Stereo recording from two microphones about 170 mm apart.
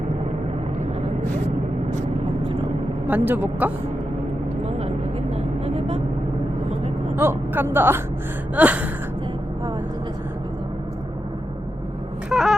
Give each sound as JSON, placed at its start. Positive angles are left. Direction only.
{"t": 3.1, "sound": "speech", "side_deg": -10}
{"t": 5.6, "sound": "vehicle", "side_deg": -35}
{"t": 7.2, "sound": "a woman's voice", "side_deg": -15}
{"t": 12.3, "sound": "a sound", "side_deg": 0}